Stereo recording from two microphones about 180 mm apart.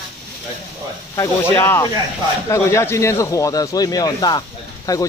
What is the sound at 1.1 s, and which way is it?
Speech, 15° left (ahead or behind).